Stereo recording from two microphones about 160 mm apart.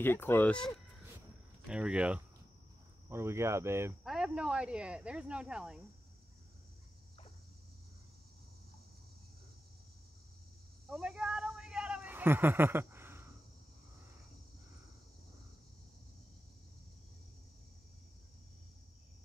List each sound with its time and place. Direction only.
0.0 s speech: 15° left (ahead or behind); by 3.9 s 15° right (ahead or behind)
4.0 s speech: 5° right (ahead or behind)
10.9 s a sound: 5° right (ahead or behind)